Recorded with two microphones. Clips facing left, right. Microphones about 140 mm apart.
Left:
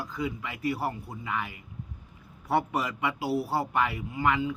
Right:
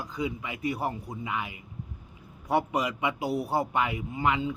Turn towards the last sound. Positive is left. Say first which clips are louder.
# even
turn(degrees=-20)  # may be behind; listen again after turning